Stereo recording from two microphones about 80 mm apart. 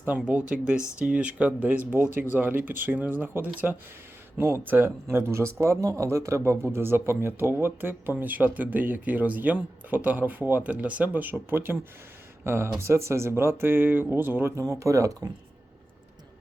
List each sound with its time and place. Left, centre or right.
0.2 s speech: centre; by 15.3 s right